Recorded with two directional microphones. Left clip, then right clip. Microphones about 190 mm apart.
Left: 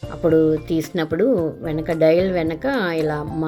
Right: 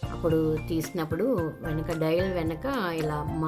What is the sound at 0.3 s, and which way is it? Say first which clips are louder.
Speech: left 10 dB; 20° left (ahead or behind).